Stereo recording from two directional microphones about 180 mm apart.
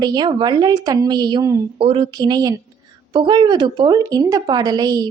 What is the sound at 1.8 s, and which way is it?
Speech, 30° right (ahead or behind).